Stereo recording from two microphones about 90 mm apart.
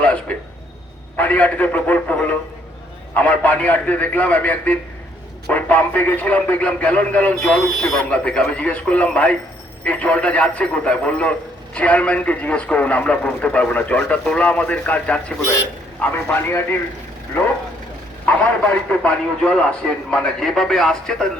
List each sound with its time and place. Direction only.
0.0 s a sound: 15° left (ahead or behind)
1.1 s a man's voice: 15° left (ahead or behind)
18.9 s a man's voice: 10° left (ahead or behind)